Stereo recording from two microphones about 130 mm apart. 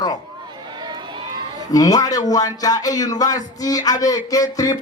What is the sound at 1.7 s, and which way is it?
Speech, 25° left (ahead or behind).